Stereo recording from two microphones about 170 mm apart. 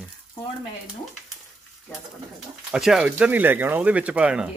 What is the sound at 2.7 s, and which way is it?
Speech, 5° right (ahead or behind).